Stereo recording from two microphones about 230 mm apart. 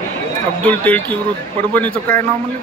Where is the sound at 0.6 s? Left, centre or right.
Centre.